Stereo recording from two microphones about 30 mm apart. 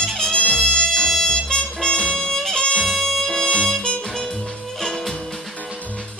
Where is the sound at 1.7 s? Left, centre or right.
Left.